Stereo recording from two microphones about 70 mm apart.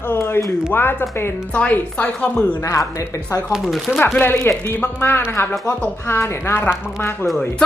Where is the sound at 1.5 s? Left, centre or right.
Centre.